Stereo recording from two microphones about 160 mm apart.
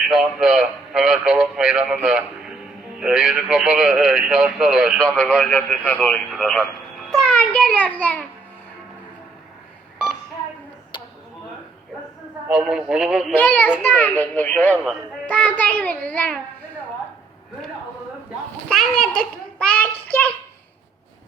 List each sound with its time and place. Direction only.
0.1 s a child's voice: centre (ahead or behind)
10.9 s a sound: 30° left (ahead or behind)
12.5 s speech: 5° right (ahead or behind)
13.3 s a child's voice: 10° left (ahead or behind)
18.7 s a child's voice: centre (ahead or behind)